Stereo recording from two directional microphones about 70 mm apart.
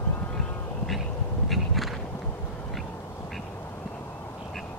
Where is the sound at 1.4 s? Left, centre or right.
Centre.